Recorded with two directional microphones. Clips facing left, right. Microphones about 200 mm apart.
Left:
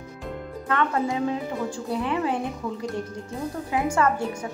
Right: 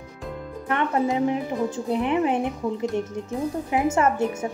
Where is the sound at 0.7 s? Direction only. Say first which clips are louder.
Right 2 dB; 20° right (ahead or behind).